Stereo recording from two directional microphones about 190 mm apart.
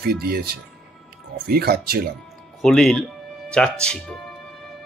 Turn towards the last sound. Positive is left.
turn(degrees=5)  # may be behind; listen again after turning